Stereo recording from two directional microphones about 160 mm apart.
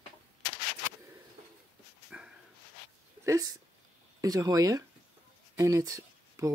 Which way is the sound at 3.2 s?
20° right (ahead or behind).